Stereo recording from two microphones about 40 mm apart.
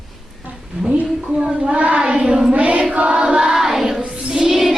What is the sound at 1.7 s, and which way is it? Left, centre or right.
Choir, right.